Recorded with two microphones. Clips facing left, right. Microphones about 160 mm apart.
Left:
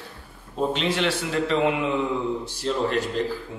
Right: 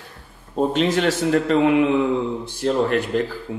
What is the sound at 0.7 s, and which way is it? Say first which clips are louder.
Speech: right 6 dB; 45° right (ahead or behind).